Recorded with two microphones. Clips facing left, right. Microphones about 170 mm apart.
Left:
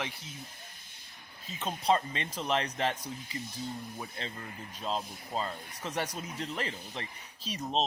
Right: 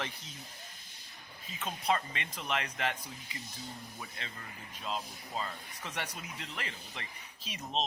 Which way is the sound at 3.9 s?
30° left (ahead or behind).